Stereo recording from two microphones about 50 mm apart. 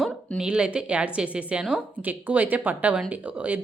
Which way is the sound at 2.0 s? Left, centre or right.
Right.